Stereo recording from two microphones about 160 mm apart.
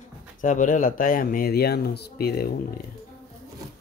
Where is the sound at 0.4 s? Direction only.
55° left (ahead or behind); by 2.5 s 75° left (ahead or behind).